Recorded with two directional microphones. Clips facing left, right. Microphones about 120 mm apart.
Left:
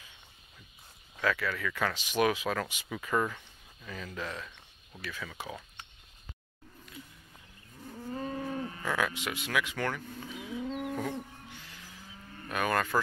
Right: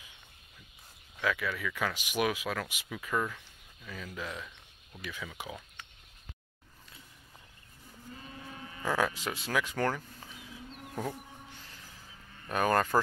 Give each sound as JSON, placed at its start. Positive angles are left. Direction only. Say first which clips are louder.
{"t": 1.3, "sound": "speech", "louder": "left 1 dB", "side_deg": -10}
{"t": 8.1, "sound": "cattle", "louder": "left 12 dB", "side_deg": 45}
{"t": 8.8, "sound": "speech", "louder": "right 3 dB", "side_deg": -35}
{"t": 10.7, "sound": "chicken", "louder": "left 13 dB", "side_deg": 90}
{"t": 12.4, "sound": "speech", "louder": "right 3 dB", "side_deg": -35}